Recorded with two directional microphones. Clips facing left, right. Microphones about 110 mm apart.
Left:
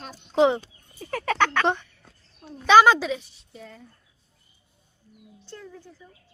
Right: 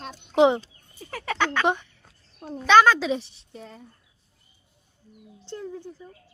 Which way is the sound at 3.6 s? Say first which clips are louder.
Right 1 dB; 25° right (ahead or behind).